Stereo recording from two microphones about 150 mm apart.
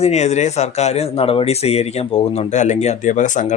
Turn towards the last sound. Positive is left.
turn(degrees=55)  # may be behind; listen again after turning